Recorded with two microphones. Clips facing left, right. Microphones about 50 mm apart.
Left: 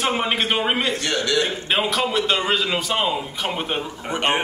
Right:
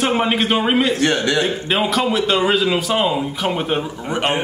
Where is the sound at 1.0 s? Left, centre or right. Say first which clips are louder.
Right 5 dB; right.